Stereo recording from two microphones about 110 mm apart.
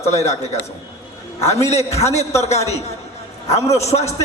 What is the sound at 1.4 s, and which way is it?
A man's voice, 80° left.